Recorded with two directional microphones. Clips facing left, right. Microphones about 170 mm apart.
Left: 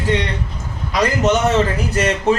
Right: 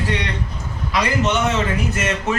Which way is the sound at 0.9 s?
40° left (ahead or behind).